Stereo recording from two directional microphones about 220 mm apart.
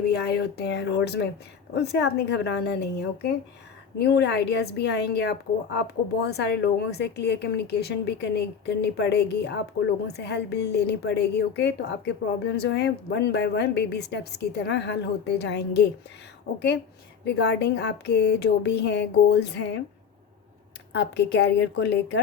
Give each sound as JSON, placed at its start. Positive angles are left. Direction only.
{"t": 0.1, "sound": "a woman's voice", "side_deg": 50}
{"t": 20.9, "sound": "a woman's voice", "side_deg": 50}